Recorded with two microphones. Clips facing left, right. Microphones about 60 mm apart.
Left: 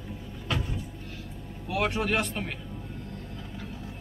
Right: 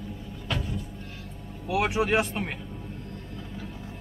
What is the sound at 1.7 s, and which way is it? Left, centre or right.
Speech, centre.